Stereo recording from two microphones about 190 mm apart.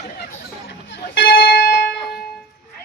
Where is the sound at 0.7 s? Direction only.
65° left (ahead or behind).